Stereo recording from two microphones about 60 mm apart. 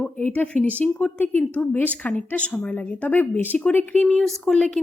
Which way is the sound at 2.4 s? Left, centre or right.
Centre.